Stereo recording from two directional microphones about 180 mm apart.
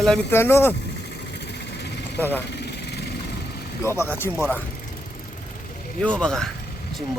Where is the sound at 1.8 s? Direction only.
70° left (ahead or behind).